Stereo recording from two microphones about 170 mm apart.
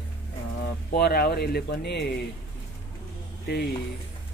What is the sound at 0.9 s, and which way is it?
Speech, 65° left (ahead or behind).